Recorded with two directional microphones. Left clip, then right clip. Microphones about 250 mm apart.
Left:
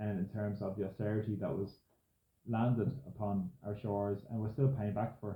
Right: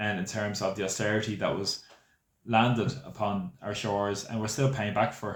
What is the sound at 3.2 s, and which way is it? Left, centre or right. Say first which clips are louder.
Speech: right 9 dB; centre.